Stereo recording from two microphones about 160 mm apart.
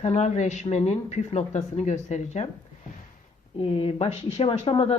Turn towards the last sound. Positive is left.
turn(degrees=35)  # may be behind; listen again after turning